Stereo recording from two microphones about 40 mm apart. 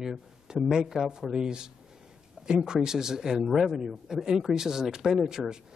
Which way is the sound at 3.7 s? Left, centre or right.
Centre.